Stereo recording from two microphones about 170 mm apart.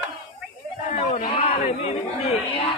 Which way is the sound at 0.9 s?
40° left (ahead or behind).